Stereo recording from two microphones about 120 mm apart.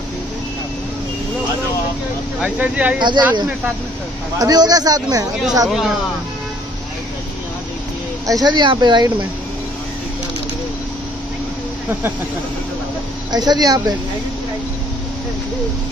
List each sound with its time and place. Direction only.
2.4 s speech: 10° right (ahead or behind)
3.0 s speech: 40° right (ahead or behind)
4.4 s speech: 35° right (ahead or behind)
5.7 s speech: 5° right (ahead or behind)
8.3 s speech: 35° right (ahead or behind)
13.3 s speech: 35° right (ahead or behind)